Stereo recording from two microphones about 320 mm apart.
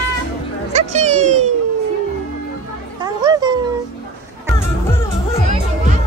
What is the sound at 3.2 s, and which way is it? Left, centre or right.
Cat, centre.